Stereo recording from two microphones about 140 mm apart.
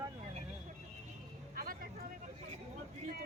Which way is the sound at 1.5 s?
90° right.